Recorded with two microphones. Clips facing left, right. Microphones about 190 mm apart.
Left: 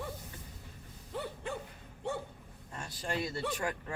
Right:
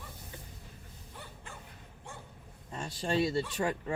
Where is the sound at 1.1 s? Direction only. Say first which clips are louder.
Left 12 dB; 65° left (ahead or behind).